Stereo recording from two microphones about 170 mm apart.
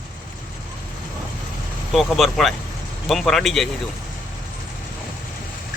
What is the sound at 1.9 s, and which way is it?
Speech, centre (ahead or behind).